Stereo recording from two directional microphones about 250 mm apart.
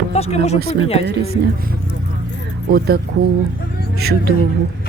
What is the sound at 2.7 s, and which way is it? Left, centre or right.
Speech, right.